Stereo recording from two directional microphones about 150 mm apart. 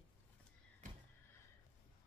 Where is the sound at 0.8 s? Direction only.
55° right (ahead or behind).